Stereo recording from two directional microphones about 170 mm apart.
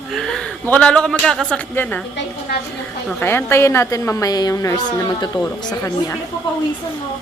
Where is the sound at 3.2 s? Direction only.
15° left (ahead or behind).